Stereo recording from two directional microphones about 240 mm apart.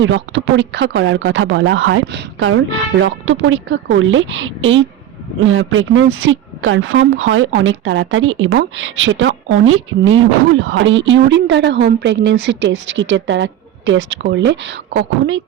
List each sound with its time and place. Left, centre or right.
0.0 s a woman's voice: right